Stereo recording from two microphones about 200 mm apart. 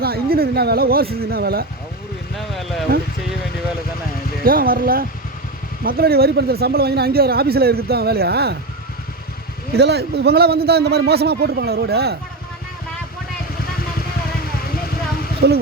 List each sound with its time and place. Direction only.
0.0 s speech: 50° right (ahead or behind)
2.4 s speech: centre (ahead or behind)
4.4 s speech: 45° right (ahead or behind)
9.7 s speech: 55° right (ahead or behind)
15.4 s speech: 55° right (ahead or behind)